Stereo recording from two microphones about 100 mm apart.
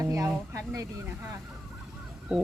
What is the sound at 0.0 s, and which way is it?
Speech, 30° right (ahead or behind).